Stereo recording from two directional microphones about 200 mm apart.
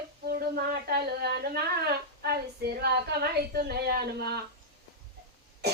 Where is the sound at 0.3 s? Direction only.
50° right (ahead or behind).